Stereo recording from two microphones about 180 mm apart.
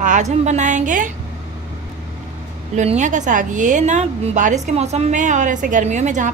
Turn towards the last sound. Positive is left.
turn(degrees=-45)  # may be behind; listen again after turning